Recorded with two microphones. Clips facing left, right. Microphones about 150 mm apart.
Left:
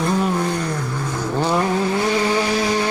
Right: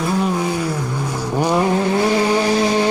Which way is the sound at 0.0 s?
5° right (ahead or behind).